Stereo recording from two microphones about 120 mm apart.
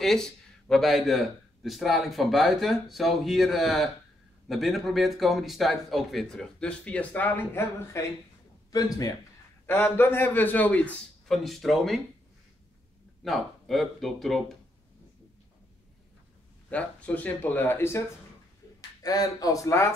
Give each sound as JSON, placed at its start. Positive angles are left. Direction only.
{"t": 0.0, "sound": "a man's voice", "side_deg": 5}
{"t": 9.7, "sound": "speech", "side_deg": 20}
{"t": 11.2, "sound": "speech", "side_deg": 0}
{"t": 13.2, "sound": "speech", "side_deg": 0}
{"t": 16.7, "sound": "speech", "side_deg": 10}
{"t": 18.8, "sound": "speech", "side_deg": 30}